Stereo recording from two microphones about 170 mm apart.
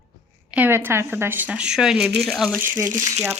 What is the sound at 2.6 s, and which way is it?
Speech, 15° right (ahead or behind).